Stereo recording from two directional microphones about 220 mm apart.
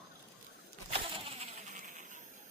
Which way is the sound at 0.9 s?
25° right (ahead or behind).